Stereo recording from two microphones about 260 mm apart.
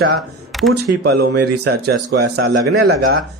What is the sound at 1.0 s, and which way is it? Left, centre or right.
Speech, right.